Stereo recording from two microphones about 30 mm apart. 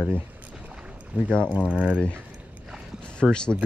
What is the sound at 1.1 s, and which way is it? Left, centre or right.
Speech, right.